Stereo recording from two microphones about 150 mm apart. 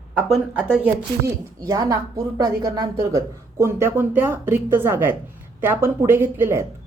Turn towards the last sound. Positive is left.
turn(degrees=-15)  # may be behind; listen again after turning